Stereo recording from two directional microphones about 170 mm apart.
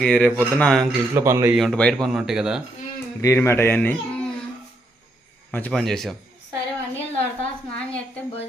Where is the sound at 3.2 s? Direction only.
15° left (ahead or behind).